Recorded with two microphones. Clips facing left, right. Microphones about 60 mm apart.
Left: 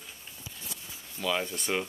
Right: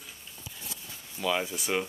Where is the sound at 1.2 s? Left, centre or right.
Centre.